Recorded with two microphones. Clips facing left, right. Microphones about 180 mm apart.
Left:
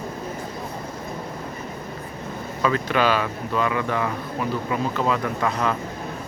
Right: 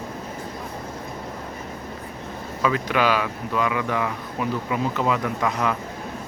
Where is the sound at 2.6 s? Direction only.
10° right (ahead or behind).